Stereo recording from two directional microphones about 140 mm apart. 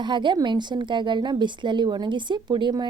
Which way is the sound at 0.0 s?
35° right (ahead or behind).